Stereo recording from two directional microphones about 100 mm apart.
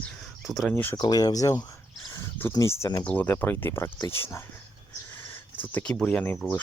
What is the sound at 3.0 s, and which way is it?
Speech, 15° left (ahead or behind).